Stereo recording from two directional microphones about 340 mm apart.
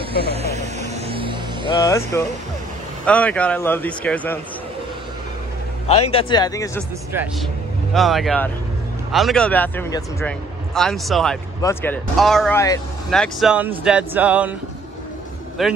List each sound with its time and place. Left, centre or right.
0.2 s vehicle: centre
1.7 s a man's voice: centre
5.9 s speech: centre
7.9 s a man's voice: centre
15.6 s a man's voice: centre